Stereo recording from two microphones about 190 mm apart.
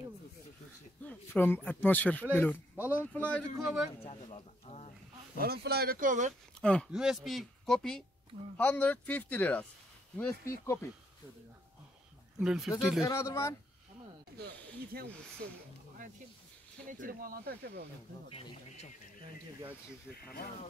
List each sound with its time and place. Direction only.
1.0 s speech: 10° left (ahead or behind)
4.0 s a sound: 30° left (ahead or behind)
5.4 s speech: 55° right (ahead or behind)
6.6 s speech: 5° left (ahead or behind)
12.4 s speech: centre (ahead or behind)
13.0 s speech: 15° left (ahead or behind)
14.4 s speech: 55° right (ahead or behind)
16.9 s speech: 45° right (ahead or behind)